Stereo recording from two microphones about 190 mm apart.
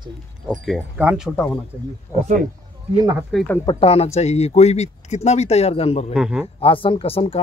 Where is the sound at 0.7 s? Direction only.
5° right (ahead or behind).